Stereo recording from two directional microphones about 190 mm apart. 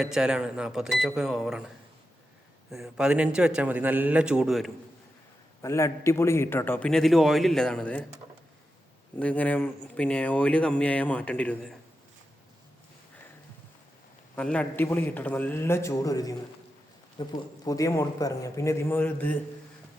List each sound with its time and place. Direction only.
0.0 s a man's voice: 5° right (ahead or behind)
5.6 s speech: 15° left (ahead or behind)
9.1 s speech: 5° left (ahead or behind)
14.3 s speech: 5° left (ahead or behind)